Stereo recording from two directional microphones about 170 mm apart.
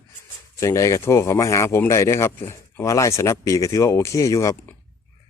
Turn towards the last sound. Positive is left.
turn(degrees=20)  # may be behind; listen again after turning